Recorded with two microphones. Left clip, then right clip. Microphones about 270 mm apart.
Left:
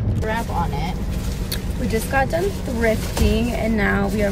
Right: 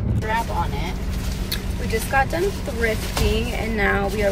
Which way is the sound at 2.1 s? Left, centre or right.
Centre.